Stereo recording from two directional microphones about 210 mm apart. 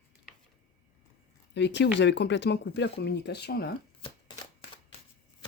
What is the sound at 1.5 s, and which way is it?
Speech, 55° left (ahead or behind).